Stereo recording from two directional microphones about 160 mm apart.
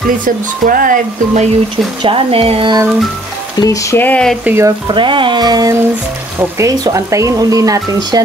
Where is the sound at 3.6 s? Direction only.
20° left (ahead or behind).